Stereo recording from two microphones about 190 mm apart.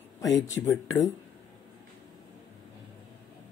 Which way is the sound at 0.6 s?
15° left (ahead or behind).